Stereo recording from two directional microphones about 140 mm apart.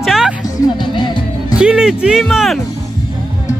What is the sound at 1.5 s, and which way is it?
Speech, 5° right (ahead or behind).